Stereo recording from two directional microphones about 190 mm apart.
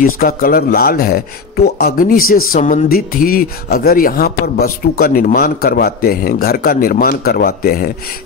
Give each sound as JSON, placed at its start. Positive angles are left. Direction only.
{"t": 0.0, "sound": "speech", "side_deg": 50}